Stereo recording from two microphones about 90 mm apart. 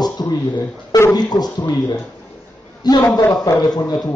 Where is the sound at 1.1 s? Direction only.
50° left (ahead or behind).